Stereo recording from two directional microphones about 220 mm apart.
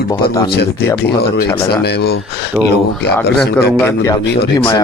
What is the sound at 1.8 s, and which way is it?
Speech, 50° left (ahead or behind).